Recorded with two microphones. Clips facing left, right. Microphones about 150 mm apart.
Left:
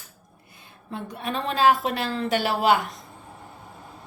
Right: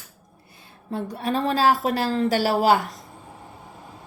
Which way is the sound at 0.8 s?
35° right (ahead or behind).